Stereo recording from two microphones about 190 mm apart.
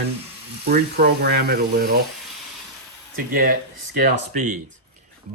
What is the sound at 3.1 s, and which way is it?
Speech, 50° right (ahead or behind).